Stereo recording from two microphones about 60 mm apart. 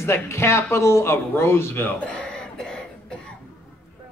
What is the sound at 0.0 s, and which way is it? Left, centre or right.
Speech, left.